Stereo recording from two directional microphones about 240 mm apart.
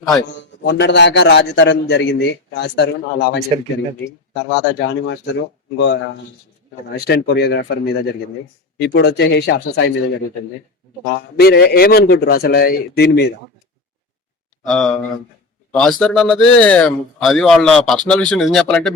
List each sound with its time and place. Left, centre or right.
0.6 s a man's voice: left
8.8 s a man's voice: left
11.3 s a man's voice: left
14.7 s a man's voice: centre